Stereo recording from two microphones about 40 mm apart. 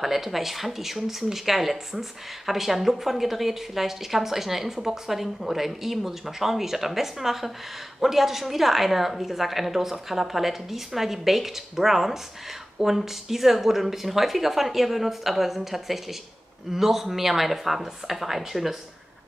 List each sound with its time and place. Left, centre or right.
0.0 s a woman's voice: centre